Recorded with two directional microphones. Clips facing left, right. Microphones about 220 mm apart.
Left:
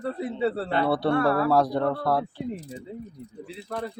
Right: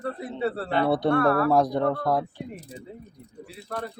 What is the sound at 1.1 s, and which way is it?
Speech, 20° left (ahead or behind).